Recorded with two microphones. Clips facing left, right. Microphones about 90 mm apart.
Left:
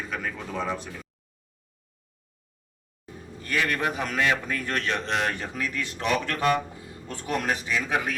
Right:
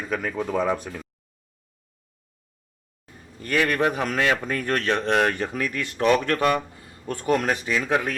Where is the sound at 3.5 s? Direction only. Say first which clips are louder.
Right 5 dB; 50° right (ahead or behind).